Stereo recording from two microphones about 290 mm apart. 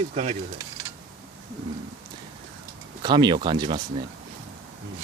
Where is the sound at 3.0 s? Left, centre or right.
Centre.